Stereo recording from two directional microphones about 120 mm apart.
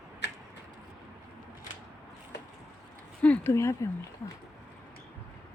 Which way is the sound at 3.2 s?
10° left (ahead or behind).